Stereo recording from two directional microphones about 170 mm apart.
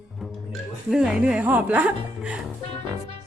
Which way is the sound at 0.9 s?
5° right (ahead or behind).